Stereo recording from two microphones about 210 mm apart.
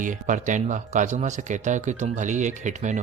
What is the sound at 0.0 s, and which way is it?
Speech, 35° right (ahead or behind).